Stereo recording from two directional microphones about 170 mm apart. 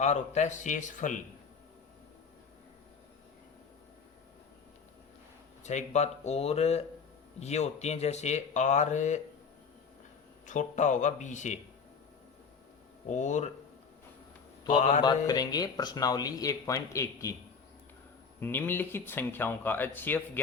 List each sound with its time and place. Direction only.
0.0 s a man's voice: 45° left (ahead or behind)
5.6 s speech: 45° left (ahead or behind)
10.4 s a man's voice: 45° left (ahead or behind)
13.1 s a man's voice: 45° left (ahead or behind)
14.7 s a man's voice: 45° left (ahead or behind)
15.3 s speech: 25° left (ahead or behind)
18.3 s speech: 10° left (ahead or behind)